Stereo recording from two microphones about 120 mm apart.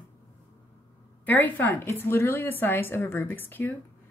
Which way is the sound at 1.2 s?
15° left (ahead or behind).